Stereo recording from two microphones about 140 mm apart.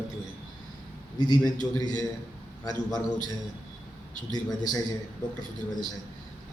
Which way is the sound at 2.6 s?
30° left (ahead or behind).